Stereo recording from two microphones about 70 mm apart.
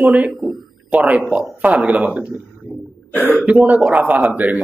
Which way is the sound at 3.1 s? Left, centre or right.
Left.